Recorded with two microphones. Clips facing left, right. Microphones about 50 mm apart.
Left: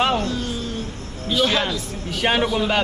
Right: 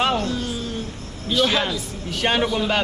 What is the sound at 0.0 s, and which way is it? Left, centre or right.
A man's voice, centre.